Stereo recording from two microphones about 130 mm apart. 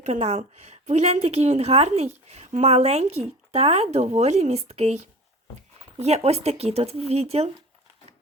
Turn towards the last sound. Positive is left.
turn(degrees=-50)  # may be behind; listen again after turning